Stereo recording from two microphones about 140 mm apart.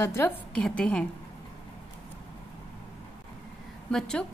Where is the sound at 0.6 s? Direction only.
5° left (ahead or behind).